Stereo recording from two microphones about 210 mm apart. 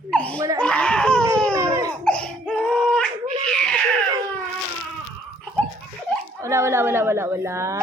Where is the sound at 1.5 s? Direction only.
15° right (ahead or behind).